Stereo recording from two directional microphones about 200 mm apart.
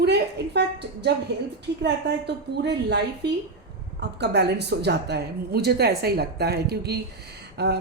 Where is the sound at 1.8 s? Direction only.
60° right (ahead or behind).